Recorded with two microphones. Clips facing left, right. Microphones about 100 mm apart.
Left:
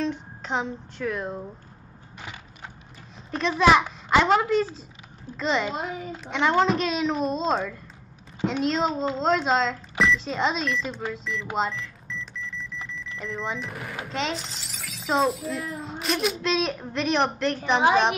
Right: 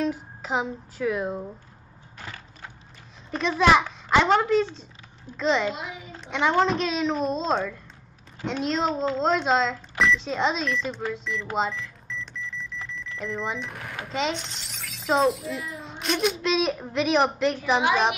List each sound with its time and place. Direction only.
0.0 s speech: 5° right (ahead or behind)
2.1 s a sound: 15° left (ahead or behind)
3.3 s speech: centre (ahead or behind)
5.8 s a child's voice: 40° left (ahead or behind)
6.2 s speech: centre (ahead or behind)